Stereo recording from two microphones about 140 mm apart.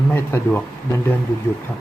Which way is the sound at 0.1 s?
15° left (ahead or behind).